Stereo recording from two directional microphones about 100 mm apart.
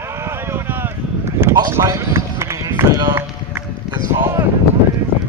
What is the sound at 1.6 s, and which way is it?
Run, 30° right (ahead or behind).